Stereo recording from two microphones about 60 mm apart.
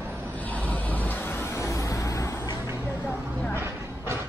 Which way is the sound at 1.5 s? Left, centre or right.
Left.